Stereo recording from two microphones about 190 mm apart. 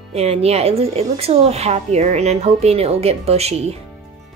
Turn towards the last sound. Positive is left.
turn(degrees=-35)  # may be behind; listen again after turning